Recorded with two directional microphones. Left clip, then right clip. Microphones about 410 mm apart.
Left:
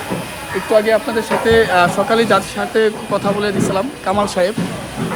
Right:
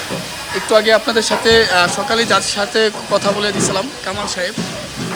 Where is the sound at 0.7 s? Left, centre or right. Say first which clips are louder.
Right 2 dB; centre.